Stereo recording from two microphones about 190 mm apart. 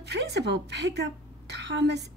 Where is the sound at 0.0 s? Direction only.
65° right (ahead or behind).